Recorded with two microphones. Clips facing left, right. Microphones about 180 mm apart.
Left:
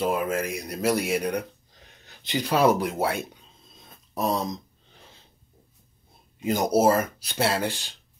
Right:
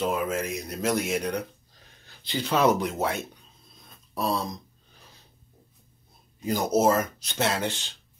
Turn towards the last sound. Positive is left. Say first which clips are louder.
# left 2 dB
turn(degrees=10)  # may be behind; listen again after turning